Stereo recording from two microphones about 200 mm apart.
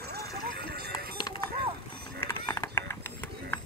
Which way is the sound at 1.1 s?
20° left (ahead or behind).